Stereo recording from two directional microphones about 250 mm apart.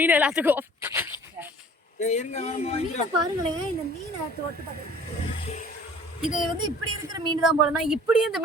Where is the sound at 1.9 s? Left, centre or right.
Left.